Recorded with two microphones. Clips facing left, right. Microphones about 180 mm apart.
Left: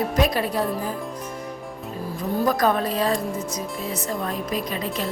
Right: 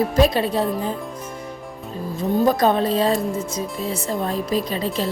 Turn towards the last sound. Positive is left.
turn(degrees=-30)  # may be behind; listen again after turning